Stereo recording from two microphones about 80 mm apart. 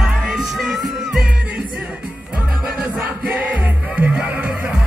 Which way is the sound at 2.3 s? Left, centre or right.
Centre.